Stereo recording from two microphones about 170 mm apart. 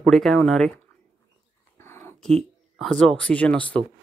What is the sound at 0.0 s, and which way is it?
Speech, centre (ahead or behind).